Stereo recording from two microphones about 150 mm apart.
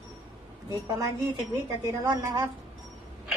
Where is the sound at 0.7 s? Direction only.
25° right (ahead or behind).